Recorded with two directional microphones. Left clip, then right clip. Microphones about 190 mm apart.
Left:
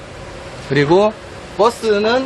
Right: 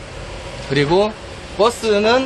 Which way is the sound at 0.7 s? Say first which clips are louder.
Left 3 dB; 30° left (ahead or behind).